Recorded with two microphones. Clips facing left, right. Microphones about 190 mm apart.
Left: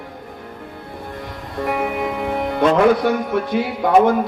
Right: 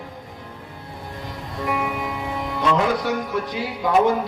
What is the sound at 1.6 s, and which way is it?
Speech, 55° left (ahead or behind).